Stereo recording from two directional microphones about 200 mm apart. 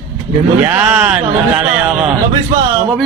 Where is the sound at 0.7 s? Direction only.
10° right (ahead or behind).